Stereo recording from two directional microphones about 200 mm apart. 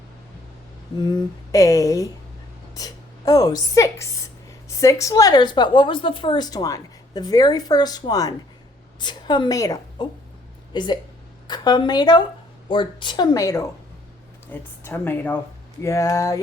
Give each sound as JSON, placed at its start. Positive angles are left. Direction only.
{"t": 0.9, "sound": "a woman's voice", "side_deg": 20}